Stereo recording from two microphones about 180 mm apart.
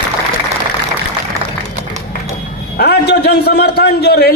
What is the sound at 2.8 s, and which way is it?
A man's voice, 65° left (ahead or behind).